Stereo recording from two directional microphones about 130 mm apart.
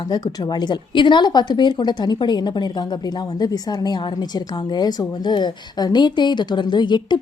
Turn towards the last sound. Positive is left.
turn(degrees=35)  # may be behind; listen again after turning